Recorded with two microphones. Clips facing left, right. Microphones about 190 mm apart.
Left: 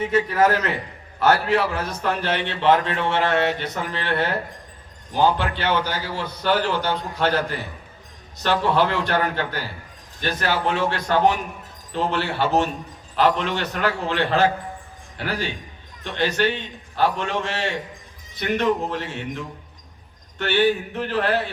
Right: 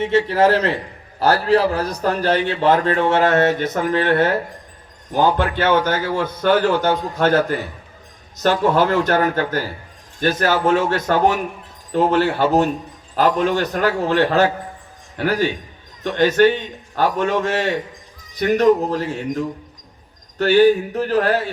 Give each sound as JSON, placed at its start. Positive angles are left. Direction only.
{"t": 0.0, "sound": "a man's voice", "side_deg": -30}